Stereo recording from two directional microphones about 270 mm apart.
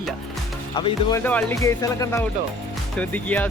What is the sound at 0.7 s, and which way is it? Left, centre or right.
Speech, centre.